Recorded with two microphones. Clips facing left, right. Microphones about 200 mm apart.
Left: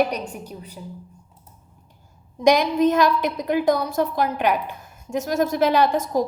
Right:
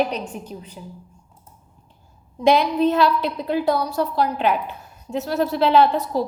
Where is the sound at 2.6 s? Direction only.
15° left (ahead or behind).